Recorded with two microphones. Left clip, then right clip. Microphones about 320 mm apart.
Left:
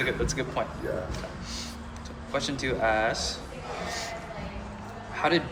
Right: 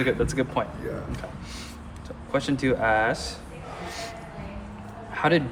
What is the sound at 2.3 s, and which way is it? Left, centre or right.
Speech, right.